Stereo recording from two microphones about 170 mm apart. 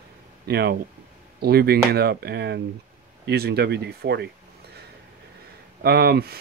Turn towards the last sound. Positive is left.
turn(degrees=-65)  # may be behind; listen again after turning